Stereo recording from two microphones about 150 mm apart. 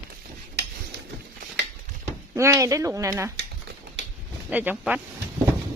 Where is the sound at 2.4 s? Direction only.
20° right (ahead or behind).